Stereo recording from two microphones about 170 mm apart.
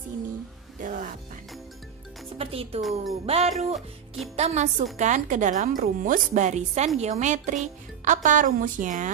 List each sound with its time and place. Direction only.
0.7 s music: 55° right (ahead or behind)
2.3 s music: 35° right (ahead or behind)
2.8 s speech: centre (ahead or behind)
3.3 s a woman's voice: 40° right (ahead or behind)
3.5 s speech: centre (ahead or behind)
4.4 s a woman's voice: 40° right (ahead or behind)